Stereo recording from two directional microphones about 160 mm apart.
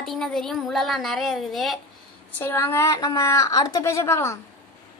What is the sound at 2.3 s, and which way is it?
A woman's voice, 15° left (ahead or behind).